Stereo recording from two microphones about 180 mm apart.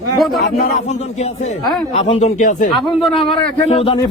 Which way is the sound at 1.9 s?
40° left (ahead or behind).